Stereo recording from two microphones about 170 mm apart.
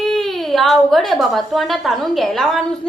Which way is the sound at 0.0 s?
Centre (ahead or behind).